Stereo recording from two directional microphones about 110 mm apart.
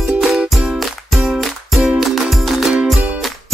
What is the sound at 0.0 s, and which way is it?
Music, centre (ahead or behind).